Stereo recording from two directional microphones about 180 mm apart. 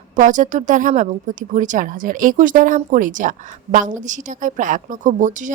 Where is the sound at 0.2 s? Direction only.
45° right (ahead or behind).